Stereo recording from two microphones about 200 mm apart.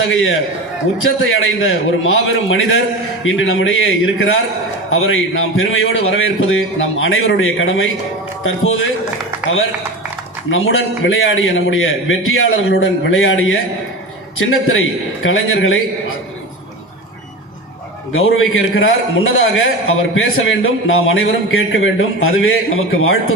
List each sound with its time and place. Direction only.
0.1 s a man's voice: 80° left
4.9 s a man's voice: 90° left
10.5 s a man's voice: 80° left
18.1 s a man's voice: 85° left